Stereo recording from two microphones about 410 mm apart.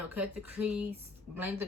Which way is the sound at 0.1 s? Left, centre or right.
Centre.